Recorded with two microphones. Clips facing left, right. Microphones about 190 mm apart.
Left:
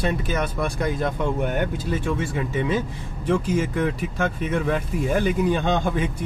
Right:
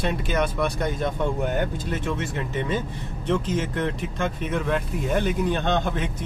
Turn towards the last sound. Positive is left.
turn(degrees=5)  # may be behind; listen again after turning